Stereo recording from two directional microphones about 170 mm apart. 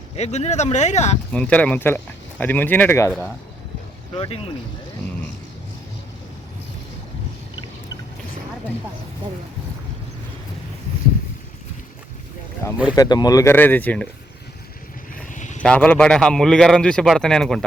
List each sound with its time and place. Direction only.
0.2 s speech: 40° left (ahead or behind)
1.3 s speech: 5° left (ahead or behind)
4.1 s speech: 25° left (ahead or behind)
12.7 s speech: 5° right (ahead or behind)
13.0 s speech: 25° left (ahead or behind)
15.1 s vehicle: 50° left (ahead or behind)
15.6 s a man's voice: 5° left (ahead or behind)